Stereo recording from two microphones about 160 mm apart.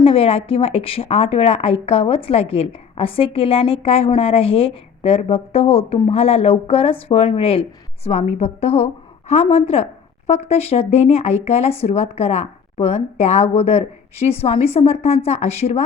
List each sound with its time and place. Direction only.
0.0 s a woman's voice: 35° left (ahead or behind)